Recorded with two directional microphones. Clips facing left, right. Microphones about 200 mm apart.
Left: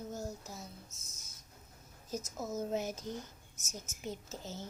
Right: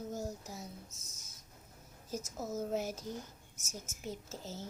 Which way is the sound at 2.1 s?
10° right (ahead or behind).